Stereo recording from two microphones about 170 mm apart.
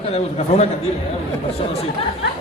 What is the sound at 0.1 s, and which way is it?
Speech, 40° left (ahead or behind).